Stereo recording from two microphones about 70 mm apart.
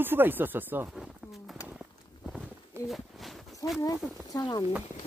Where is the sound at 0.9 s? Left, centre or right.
Centre.